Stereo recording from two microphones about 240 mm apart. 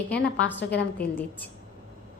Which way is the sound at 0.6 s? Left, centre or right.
Left.